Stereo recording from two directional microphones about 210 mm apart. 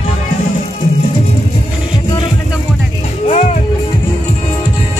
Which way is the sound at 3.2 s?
35° left (ahead or behind).